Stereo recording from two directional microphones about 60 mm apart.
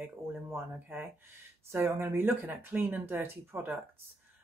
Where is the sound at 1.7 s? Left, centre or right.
Right.